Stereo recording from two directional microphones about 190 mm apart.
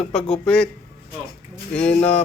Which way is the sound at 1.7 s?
5° left (ahead or behind).